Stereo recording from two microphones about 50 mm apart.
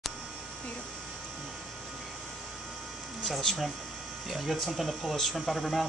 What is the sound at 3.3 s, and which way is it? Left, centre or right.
Speech, centre.